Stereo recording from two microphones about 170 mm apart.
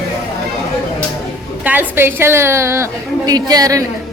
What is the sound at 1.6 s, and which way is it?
A woman's voice, 10° right (ahead or behind).